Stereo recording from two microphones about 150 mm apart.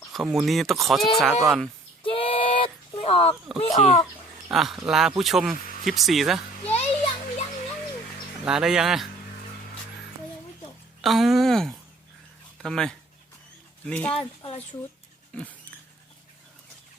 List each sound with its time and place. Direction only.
0.1 s speech: centre (ahead or behind)
2.0 s female singing: 35° left (ahead or behind)
3.6 s speech: 55° left (ahead or behind)
4.5 s speech: centre (ahead or behind)
6.7 s music: 45° left (ahead or behind)
8.4 s speech: 5° right (ahead or behind)
11.0 s speech: centre (ahead or behind)